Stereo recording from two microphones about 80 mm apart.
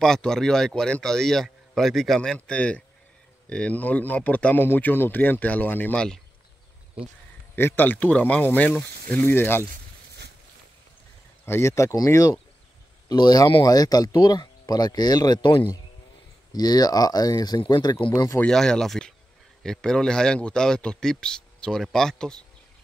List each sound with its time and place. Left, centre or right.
0.0 s a man's voice: centre; by 5.9 s left
5.9 s a man's voice: centre
7.5 s speech: left
11.4 s speech: left
13.1 s speech: left
16.5 s speech: left
17.6 s speech: left
18.4 s a man's voice: centre